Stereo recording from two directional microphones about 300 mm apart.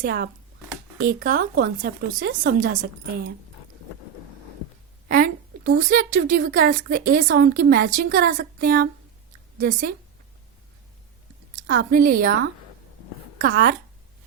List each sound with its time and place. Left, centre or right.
0.0 s a woman's voice: right
5.0 s a woman's voice: right
11.6 s a woman's voice: right